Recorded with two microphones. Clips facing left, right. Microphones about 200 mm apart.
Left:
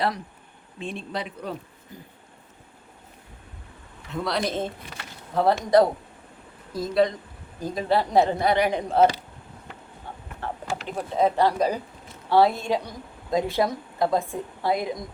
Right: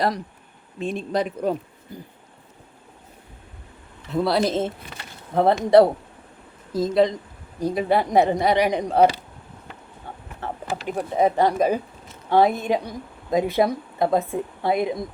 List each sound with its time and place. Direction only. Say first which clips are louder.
0.8 s speech: right 7 dB; 45° right (ahead or behind)
4.1 s a woman's voice: right 6 dB; 35° right (ahead or behind)
7.6 s a woman's voice: right 3 dB; 10° right (ahead or behind)
8.4 s speech: right 2 dB; centre (ahead or behind)
8.7 s a woman's voice: right 2 dB; 15° right (ahead or behind)
10.4 s a woman's voice: right 3 dB; 15° right (ahead or behind)